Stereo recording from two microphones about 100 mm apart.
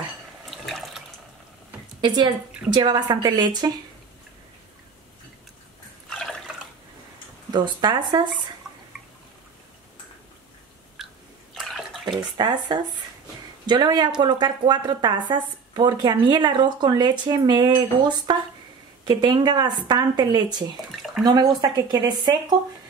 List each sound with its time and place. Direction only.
0.5 s water: centre (ahead or behind)
2.0 s a woman's voice: 55° right (ahead or behind)
6.0 s water: 5° left (ahead or behind)
7.5 s a woman's voice: 45° right (ahead or behind)
8.6 s drip: 5° right (ahead or behind)
11.0 s biting: 5° right (ahead or behind)
11.5 s bathtub: 5° left (ahead or behind)
12.1 s a woman's voice: 45° right (ahead or behind)